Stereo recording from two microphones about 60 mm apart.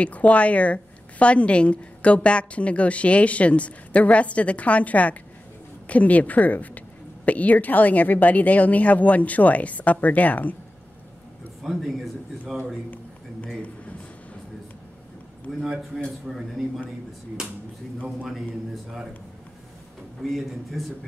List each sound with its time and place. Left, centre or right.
0.0 s a woman's voice: left
11.6 s speech: centre
15.6 s speech: centre
20.2 s speech: centre